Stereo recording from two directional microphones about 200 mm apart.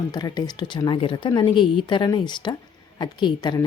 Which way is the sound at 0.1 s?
20° left (ahead or behind).